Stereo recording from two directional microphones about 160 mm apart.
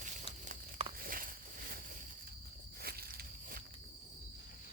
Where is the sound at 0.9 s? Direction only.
65° right (ahead or behind).